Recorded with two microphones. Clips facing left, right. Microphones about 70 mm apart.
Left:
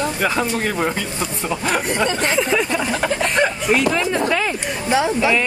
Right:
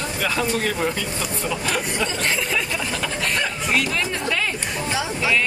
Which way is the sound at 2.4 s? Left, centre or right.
Left.